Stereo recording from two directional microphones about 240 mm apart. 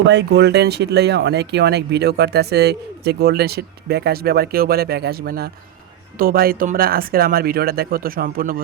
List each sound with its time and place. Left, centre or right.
0.1 s speech: right